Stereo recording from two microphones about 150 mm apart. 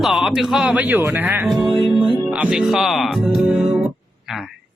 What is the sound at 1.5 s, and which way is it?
Music, centre (ahead or behind).